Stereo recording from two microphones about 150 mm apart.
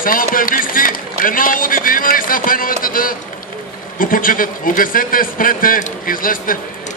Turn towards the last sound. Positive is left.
turn(degrees=70)  # may be behind; listen again after turning